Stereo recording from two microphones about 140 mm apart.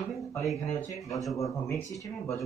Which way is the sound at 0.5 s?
20° left (ahead or behind).